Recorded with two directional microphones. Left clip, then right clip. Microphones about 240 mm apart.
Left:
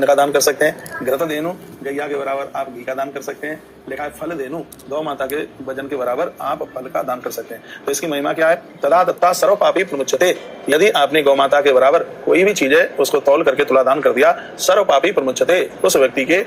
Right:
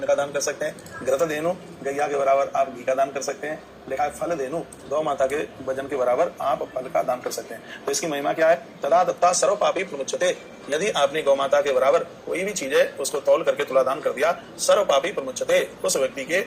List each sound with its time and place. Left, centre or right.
0.0 s a man's voice: left
1.0 s a man's voice: centre